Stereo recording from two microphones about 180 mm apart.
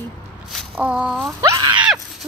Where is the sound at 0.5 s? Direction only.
Centre (ahead or behind).